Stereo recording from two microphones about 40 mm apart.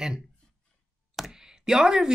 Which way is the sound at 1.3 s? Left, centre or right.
Centre.